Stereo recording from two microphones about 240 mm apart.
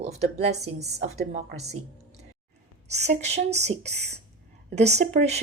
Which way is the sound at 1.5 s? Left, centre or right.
Right.